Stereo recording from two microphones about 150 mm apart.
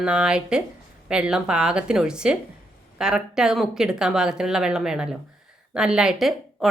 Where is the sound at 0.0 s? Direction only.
5° right (ahead or behind).